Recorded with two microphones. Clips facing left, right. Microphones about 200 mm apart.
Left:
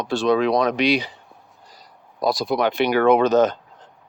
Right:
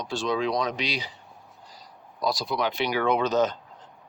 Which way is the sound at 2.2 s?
55° left (ahead or behind).